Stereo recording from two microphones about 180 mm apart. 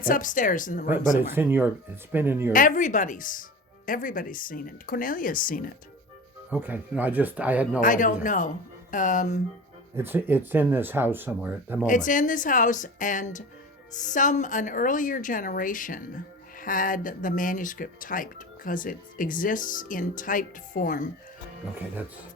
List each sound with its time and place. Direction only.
0.0 s speech: 50° left (ahead or behind)
1.3 s speech: 10° right (ahead or behind)
2.5 s speech: 50° left (ahead or behind)
6.5 s speech: 10° right (ahead or behind)
7.8 s speech: 45° left (ahead or behind)
9.9 s speech: 10° right (ahead or behind)
11.9 s speech: 45° left (ahead or behind)